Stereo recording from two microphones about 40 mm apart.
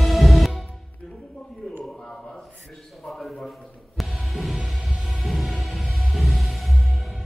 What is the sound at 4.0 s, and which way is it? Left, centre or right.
Music, centre.